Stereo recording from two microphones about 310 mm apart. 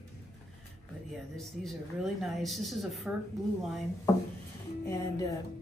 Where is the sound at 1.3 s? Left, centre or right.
Centre.